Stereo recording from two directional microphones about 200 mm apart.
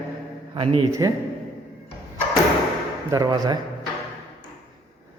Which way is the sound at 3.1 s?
20° right (ahead or behind).